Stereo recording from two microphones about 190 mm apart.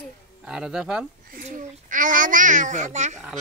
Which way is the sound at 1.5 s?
45° right (ahead or behind).